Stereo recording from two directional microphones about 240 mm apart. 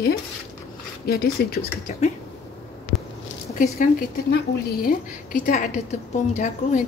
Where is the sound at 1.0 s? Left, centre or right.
Left.